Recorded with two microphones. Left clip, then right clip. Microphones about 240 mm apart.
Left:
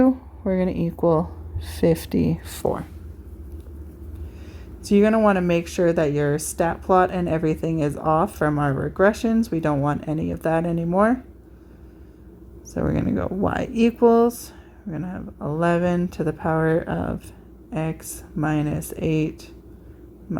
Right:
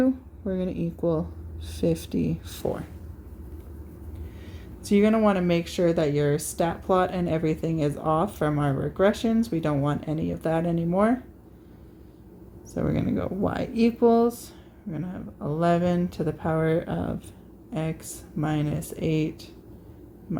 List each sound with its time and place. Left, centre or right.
0.0 s a woman's voice: left
4.8 s speech: left
12.7 s speech: left